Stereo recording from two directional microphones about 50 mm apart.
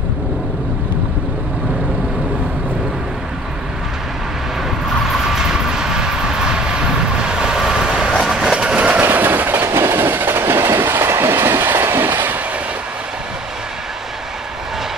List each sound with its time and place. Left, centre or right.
5.1 s vehicle: centre
8.3 s train: centre; by 9.0 s right
9.0 s train: right